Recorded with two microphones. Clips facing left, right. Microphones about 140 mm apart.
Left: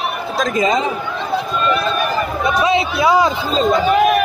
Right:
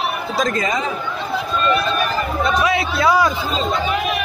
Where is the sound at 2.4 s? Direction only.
20° left (ahead or behind).